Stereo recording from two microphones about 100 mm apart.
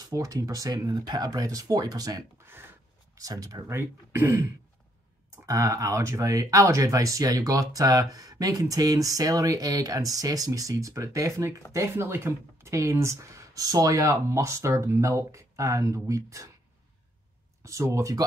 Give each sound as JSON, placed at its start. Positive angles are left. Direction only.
{"t": 0.1, "sound": "speech", "side_deg": -35}
{"t": 2.3, "sound": "speech", "side_deg": -25}
{"t": 3.2, "sound": "speech", "side_deg": -35}
{"t": 5.5, "sound": "speech", "side_deg": -35}
{"t": 17.6, "sound": "speech", "side_deg": -30}